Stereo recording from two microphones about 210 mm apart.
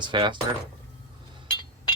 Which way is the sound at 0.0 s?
20° right (ahead or behind).